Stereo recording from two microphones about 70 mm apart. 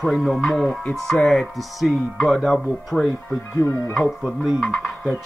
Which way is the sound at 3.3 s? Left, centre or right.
Left.